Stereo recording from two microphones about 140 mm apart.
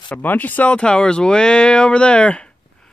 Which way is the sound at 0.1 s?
10° left (ahead or behind).